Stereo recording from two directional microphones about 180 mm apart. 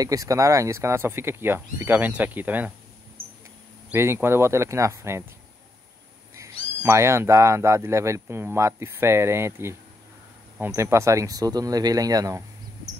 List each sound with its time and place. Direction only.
0.0 s speech: 20° right (ahead or behind)
3.9 s speech: 15° right (ahead or behind)
6.8 s speech: 15° right (ahead or behind)